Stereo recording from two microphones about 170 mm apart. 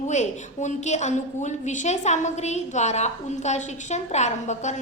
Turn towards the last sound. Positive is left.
turn(degrees=45)  # may be behind; listen again after turning